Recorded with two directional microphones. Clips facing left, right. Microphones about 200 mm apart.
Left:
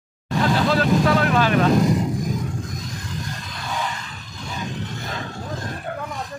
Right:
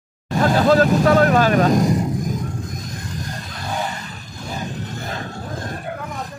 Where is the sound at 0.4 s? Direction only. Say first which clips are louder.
Right 5 dB; 45° right (ahead or behind).